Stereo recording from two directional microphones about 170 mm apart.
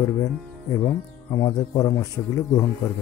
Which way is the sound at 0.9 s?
15° left (ahead or behind).